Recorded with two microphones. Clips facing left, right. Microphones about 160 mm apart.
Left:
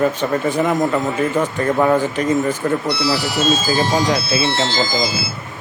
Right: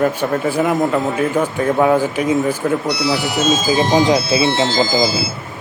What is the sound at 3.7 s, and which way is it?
Speech, 20° right (ahead or behind).